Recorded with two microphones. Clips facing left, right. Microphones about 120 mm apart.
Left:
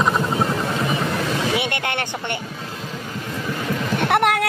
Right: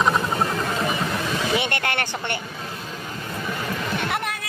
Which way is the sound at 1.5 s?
15° left (ahead or behind).